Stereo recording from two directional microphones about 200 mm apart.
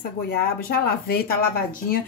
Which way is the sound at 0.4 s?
50° left (ahead or behind).